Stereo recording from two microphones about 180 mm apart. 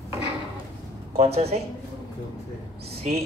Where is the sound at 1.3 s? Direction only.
35° right (ahead or behind).